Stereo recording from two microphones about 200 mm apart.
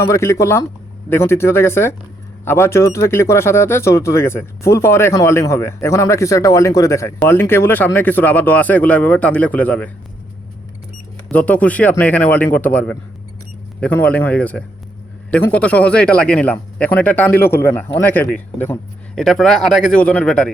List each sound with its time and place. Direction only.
0.1 s speech: 15° left (ahead or behind)
11.3 s speech: 5° left (ahead or behind)